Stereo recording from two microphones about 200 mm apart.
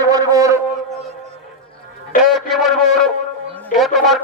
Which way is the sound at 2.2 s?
Centre (ahead or behind).